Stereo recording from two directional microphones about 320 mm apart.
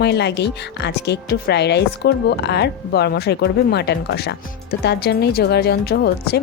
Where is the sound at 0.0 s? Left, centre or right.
Left.